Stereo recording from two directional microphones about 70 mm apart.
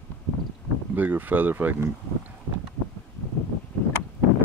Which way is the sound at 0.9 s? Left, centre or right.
Right.